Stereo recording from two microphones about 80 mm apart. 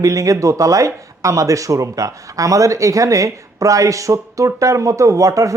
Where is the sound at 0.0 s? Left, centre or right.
Right.